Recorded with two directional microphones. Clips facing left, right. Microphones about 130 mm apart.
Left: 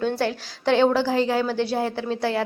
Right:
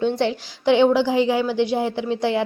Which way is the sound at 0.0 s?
20° right (ahead or behind).